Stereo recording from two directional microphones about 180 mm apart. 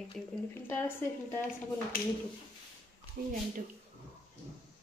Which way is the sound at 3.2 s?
60° right (ahead or behind).